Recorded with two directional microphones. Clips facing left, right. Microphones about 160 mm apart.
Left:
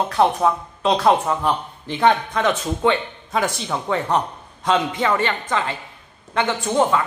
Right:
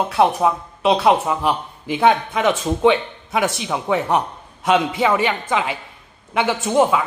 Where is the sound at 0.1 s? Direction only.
10° right (ahead or behind).